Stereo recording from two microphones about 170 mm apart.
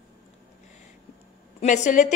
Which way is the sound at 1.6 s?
45° left (ahead or behind).